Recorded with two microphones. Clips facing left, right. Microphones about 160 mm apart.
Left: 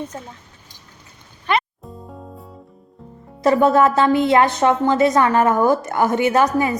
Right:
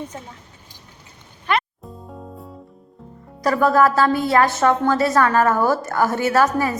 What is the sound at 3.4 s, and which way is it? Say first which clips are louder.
A woman's voice: left 2 dB; 25° left (ahead or behind).